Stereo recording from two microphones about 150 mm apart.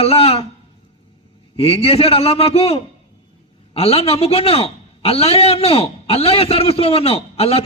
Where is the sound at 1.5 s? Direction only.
40° left (ahead or behind).